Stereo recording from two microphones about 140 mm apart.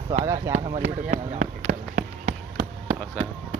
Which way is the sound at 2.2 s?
45° right (ahead or behind).